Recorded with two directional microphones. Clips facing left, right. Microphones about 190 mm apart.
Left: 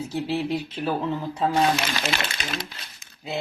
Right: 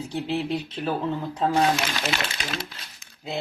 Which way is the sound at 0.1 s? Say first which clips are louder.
Even; 10° left (ahead or behind).